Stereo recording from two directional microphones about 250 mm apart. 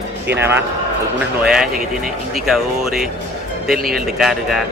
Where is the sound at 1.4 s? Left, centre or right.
Centre.